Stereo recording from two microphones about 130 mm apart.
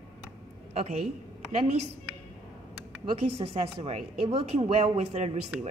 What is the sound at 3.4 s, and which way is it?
A woman's voice, 50° right (ahead or behind).